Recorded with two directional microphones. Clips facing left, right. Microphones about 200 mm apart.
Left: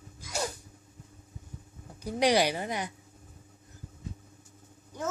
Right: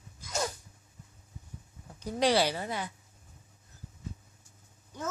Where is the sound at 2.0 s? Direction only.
15° left (ahead or behind).